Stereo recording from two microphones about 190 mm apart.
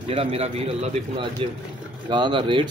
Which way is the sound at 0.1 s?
30° right (ahead or behind).